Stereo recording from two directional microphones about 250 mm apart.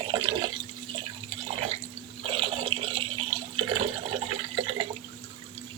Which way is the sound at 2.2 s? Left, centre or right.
Right.